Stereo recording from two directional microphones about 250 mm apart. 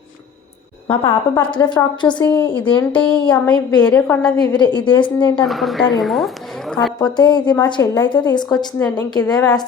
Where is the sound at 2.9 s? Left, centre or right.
Centre.